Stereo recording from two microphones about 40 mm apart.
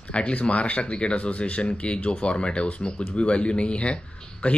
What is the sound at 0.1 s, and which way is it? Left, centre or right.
Speech, left.